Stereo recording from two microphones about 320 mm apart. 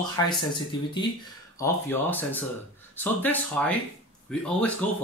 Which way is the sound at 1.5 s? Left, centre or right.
Centre.